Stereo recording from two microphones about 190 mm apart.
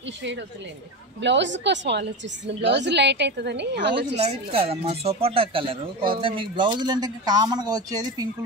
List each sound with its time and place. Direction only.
1.2 s a woman's voice: 70° right (ahead or behind)
4.2 s speech: 30° right (ahead or behind)